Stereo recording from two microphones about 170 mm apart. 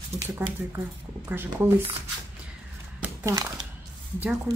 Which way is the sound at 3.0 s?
15° right (ahead or behind).